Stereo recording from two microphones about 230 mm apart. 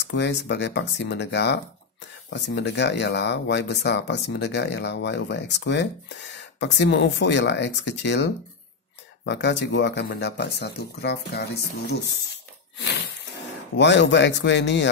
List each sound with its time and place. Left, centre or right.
0.0 s speech: left
12.7 s a sound: left
13.7 s speech: left